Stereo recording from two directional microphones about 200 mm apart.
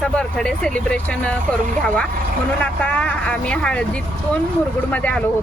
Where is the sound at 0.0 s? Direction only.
5° left (ahead or behind).